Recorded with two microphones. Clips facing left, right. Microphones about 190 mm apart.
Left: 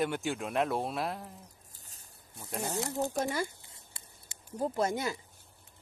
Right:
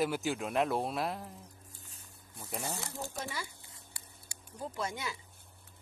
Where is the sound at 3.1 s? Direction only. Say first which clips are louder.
Left 9 dB; 50° left (ahead or behind).